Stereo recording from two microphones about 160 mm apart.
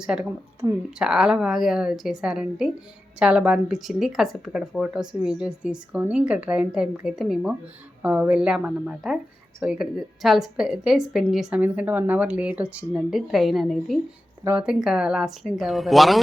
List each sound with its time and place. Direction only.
0.0 s a woman's voice: 5° right (ahead or behind)
0.6 s speech: 20° right (ahead or behind)
0.9 s a woman's voice: 5° right (ahead or behind)